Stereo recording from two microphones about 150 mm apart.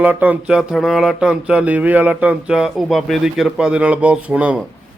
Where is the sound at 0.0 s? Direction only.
10° right (ahead or behind).